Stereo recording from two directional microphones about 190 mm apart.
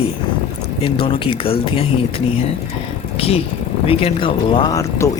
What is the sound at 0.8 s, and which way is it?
Speech, 30° left (ahead or behind).